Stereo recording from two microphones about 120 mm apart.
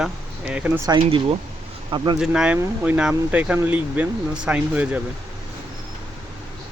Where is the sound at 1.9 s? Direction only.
40° right (ahead or behind).